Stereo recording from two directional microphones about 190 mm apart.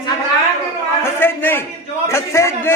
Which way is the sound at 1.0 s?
10° left (ahead or behind).